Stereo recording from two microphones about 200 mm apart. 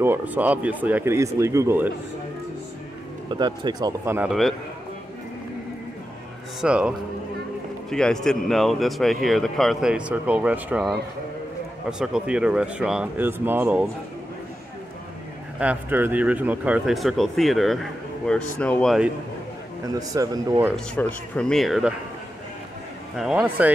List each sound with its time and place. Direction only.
0.0 s speech: 10° right (ahead or behind)
3.3 s speech: 20° right (ahead or behind)
4.3 s speech: centre (ahead or behind)
6.6 s speech: 5° right (ahead or behind)
12.0 s speech: 5° right (ahead or behind)
15.6 s speech: 10° right (ahead or behind)
19.9 s speech: 20° right (ahead or behind)
20.7 s speech: 5° left (ahead or behind)
23.1 s speech: 5° right (ahead or behind)